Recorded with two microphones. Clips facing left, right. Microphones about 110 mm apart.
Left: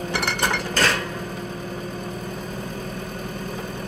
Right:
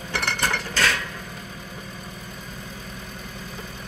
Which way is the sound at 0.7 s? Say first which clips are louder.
Left 2 dB; 40° left (ahead or behind).